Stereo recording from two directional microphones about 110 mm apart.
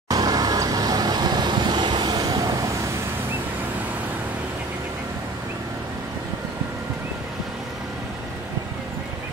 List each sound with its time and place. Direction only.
0.1 s vehicle: 35° right (ahead or behind)